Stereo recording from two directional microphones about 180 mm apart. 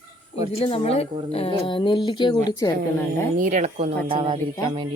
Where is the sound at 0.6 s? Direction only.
30° left (ahead or behind).